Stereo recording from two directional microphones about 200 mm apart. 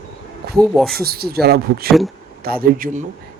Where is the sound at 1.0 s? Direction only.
50° right (ahead or behind).